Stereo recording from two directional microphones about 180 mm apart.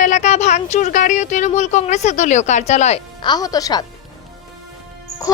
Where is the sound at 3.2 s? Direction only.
25° left (ahead or behind).